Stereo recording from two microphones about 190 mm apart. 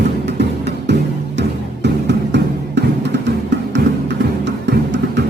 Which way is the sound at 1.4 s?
65° right (ahead or behind).